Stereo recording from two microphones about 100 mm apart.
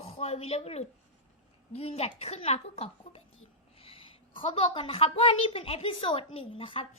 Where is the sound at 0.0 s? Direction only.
80° left.